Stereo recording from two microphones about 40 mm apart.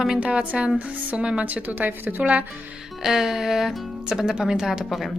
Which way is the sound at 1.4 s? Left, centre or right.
Right.